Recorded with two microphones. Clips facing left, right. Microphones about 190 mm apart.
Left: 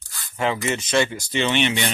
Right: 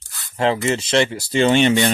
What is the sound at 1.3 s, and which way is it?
Speech, 45° right (ahead or behind).